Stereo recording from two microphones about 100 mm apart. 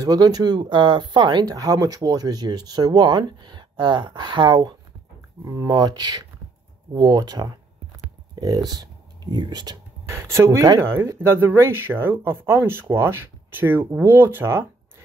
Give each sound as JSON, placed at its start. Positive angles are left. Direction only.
{"t": 0.0, "sound": "speech", "side_deg": -40}
{"t": 1.6, "sound": "speech", "side_deg": -35}
{"t": 5.4, "sound": "speech", "side_deg": -35}
{"t": 10.0, "sound": "speech", "side_deg": -30}